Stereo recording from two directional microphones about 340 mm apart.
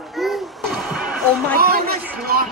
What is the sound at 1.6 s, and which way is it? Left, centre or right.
Speech, right.